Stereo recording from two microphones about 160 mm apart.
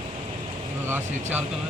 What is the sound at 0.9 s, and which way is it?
Speech, 10° right (ahead or behind).